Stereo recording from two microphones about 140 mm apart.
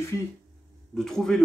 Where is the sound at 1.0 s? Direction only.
5° left (ahead or behind).